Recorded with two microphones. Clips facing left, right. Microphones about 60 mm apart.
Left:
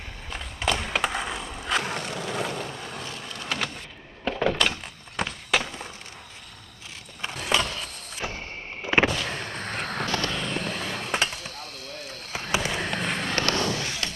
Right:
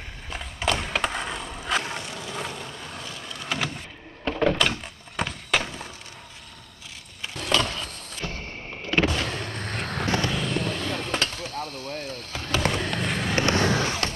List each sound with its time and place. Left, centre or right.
0.3 s skateboard: centre
2.3 s vehicle: centre
3.3 s vehicle: centre
4.2 s door: centre
7.3 s a sound: centre
8.8 s vehicle: left
9.3 s a sound: centre
10.0 s vehicle: centre
10.3 s vehicle: centre
12.3 s basketball bounce: centre
12.7 s fireworks: centre
13.4 s skateboard: right
13.7 s fireworks: right